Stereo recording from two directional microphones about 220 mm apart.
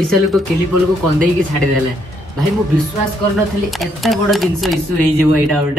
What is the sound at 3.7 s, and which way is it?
A woman's voice, centre (ahead or behind).